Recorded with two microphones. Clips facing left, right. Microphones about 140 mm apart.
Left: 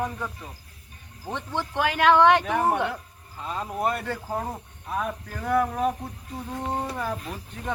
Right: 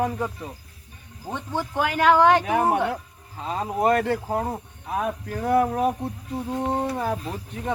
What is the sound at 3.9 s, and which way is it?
Speech, 90° right.